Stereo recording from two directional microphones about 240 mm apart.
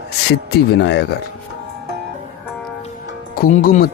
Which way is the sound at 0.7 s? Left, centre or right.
Left.